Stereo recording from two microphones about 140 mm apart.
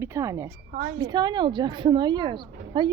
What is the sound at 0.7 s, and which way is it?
Speech, 75° right (ahead or behind).